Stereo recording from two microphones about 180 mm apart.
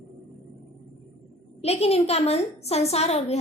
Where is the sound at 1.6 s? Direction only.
35° left (ahead or behind).